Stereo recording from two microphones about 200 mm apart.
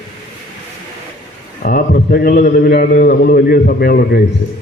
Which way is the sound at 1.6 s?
45° left (ahead or behind).